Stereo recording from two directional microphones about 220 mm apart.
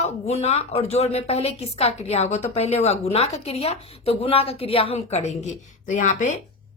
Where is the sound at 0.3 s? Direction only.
30° left (ahead or behind).